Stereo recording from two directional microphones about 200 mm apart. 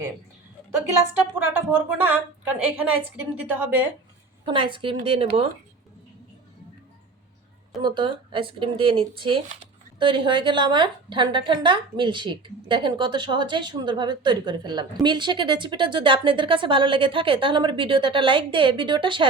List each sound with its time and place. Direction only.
1.1 s a woman's voice: 10° right (ahead or behind)
4.4 s a woman's voice: 25° right (ahead or behind)
7.8 s a woman's voice: 25° right (ahead or behind)